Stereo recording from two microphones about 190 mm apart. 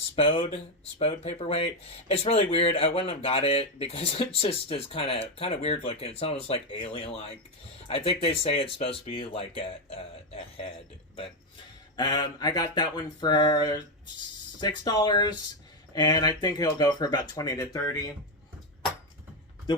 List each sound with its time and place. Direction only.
0.2 s speech: 30° left (ahead or behind)
11.9 s speech: 20° left (ahead or behind)